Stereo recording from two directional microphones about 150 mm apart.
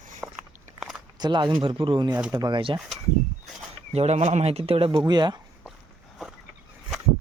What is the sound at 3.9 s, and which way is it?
Speech, 45° right (ahead or behind).